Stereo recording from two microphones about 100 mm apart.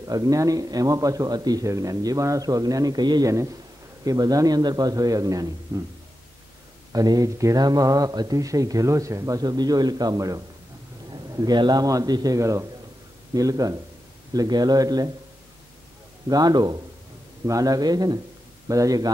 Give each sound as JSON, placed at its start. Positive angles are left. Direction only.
{"t": 0.0, "sound": "speech", "side_deg": -35}
{"t": 5.7, "sound": "a sound", "side_deg": -30}
{"t": 6.9, "sound": "speech", "side_deg": -40}
{"t": 11.1, "sound": "a sound", "side_deg": -40}
{"t": 11.5, "sound": "speech", "side_deg": -45}
{"t": 16.3, "sound": "speech", "side_deg": -40}